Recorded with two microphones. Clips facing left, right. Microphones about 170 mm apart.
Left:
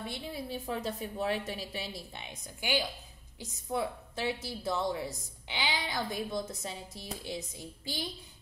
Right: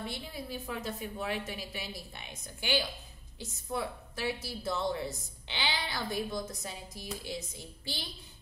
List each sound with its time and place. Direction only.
0.1 s a woman's voice: 30° left (ahead or behind)